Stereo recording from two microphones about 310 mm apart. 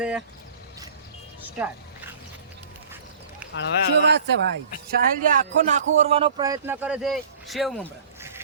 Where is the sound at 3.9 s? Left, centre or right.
Right.